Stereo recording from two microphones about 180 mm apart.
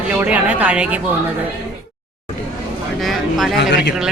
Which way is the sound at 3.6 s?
70° left (ahead or behind).